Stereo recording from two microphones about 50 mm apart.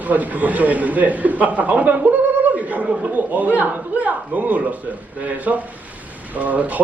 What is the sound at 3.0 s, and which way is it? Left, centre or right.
A man's voice, right.